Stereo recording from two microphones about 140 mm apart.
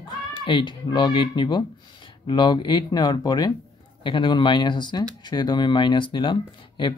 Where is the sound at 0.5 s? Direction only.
35° left (ahead or behind).